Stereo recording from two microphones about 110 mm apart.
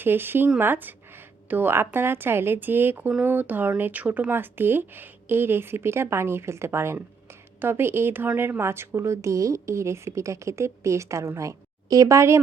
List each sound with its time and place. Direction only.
0.0 s a woman's voice: 20° right (ahead or behind)